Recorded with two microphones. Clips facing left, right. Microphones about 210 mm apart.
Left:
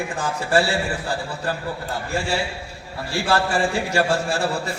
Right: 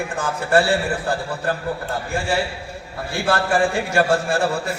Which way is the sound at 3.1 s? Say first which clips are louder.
Right 1 dB; 55° right (ahead or behind).